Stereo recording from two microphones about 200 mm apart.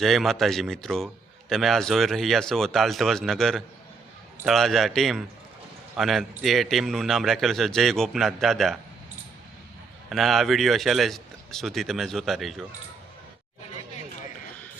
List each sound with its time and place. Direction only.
0.0 s a man's voice: centre (ahead or behind)
10.1 s a man's voice: centre (ahead or behind)